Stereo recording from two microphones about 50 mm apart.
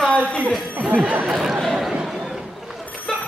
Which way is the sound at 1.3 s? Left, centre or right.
Centre.